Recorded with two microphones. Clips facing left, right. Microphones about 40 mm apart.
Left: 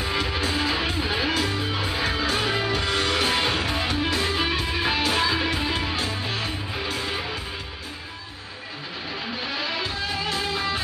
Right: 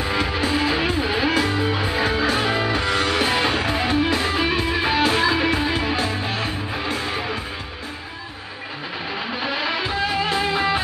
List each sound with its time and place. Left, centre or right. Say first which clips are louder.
0.0 s music: right 3 dB; right
9.3 s music: right 5 dB; right